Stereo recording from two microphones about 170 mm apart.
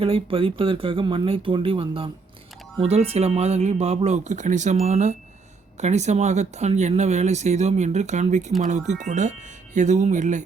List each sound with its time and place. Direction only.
0.0 s speech: 30° right (ahead or behind)